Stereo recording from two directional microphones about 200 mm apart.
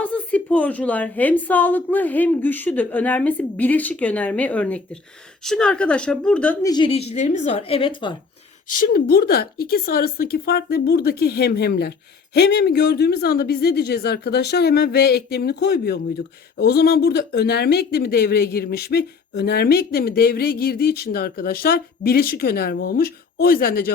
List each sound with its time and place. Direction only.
0.0 s a woman's voice: 5° left (ahead or behind); by 8.1 s 25° left (ahead or behind)
8.9 s a woman's voice: 50° left (ahead or behind)